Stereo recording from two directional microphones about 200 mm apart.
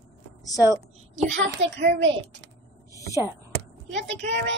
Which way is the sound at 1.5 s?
65° right (ahead or behind).